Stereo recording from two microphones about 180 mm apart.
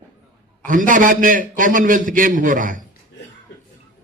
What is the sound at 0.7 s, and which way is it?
A man's voice, 50° right (ahead or behind).